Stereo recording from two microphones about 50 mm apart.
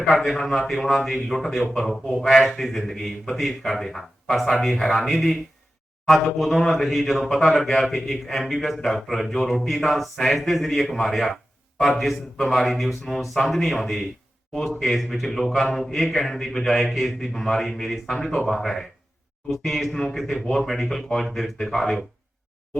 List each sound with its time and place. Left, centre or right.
0.3 s a man's voice: centre